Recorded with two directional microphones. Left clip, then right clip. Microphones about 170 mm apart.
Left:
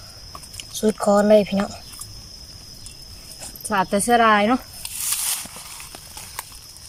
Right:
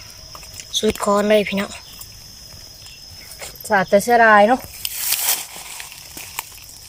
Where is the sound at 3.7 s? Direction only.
45° right (ahead or behind).